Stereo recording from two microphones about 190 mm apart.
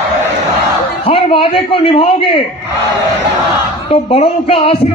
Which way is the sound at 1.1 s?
25° left (ahead or behind).